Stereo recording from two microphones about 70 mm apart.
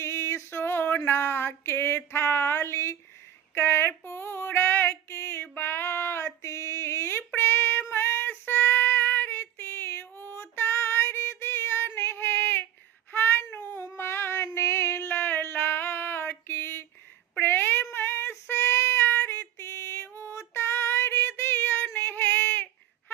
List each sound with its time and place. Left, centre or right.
0.0 s a sound: left
3.5 s female singing: left
7.3 s child singing: left
10.6 s female singing: left
13.1 s child singing: left
13.6 s a sound: left
17.9 s child singing: left
19.5 s female singing: left